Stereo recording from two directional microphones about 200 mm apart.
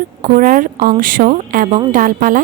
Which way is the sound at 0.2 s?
45° right (ahead or behind).